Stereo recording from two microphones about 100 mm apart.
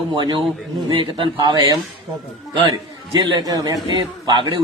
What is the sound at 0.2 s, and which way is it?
Speech, 55° right (ahead or behind).